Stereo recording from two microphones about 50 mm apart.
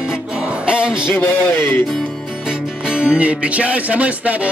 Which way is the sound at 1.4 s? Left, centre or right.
Left.